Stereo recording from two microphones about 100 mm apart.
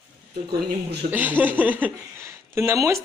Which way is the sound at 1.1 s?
15° right (ahead or behind).